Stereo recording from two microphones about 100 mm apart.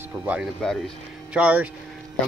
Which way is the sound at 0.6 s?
5° left (ahead or behind).